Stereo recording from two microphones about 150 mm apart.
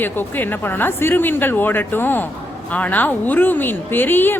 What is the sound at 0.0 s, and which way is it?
Speech, 15° left (ahead or behind).